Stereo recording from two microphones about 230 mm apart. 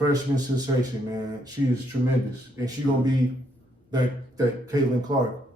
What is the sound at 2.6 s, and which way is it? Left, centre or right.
A man's voice, centre.